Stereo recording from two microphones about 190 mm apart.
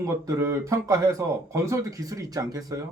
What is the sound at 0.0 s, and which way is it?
Speech, 15° right (ahead or behind).